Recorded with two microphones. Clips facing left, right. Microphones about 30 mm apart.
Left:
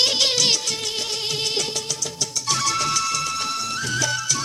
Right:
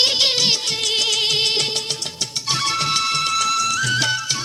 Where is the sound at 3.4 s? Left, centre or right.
Right.